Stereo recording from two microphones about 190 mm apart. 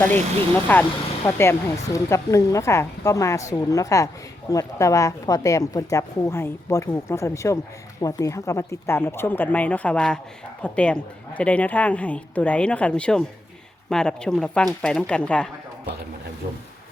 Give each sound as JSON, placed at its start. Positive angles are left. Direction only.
{"t": 0.0, "sound": "speech", "side_deg": 10}